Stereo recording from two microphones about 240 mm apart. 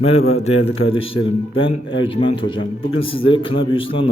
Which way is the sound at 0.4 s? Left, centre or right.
Left.